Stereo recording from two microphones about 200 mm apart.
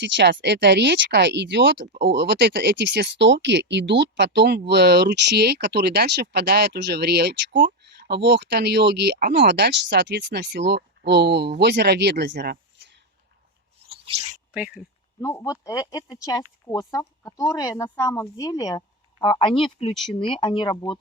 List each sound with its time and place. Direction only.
0.0 s speech: 60° right (ahead or behind)
13.9 s a sound: 30° right (ahead or behind)
15.2 s speech: 15° left (ahead or behind)